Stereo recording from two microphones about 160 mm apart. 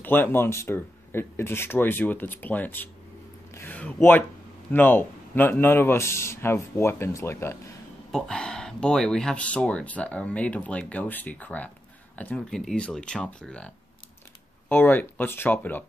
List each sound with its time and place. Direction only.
0.0 s speech: 15° left (ahead or behind)
8.1 s speech: 5° left (ahead or behind)